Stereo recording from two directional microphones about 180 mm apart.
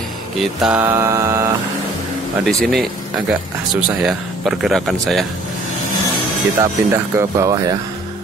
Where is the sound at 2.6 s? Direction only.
Centre (ahead or behind).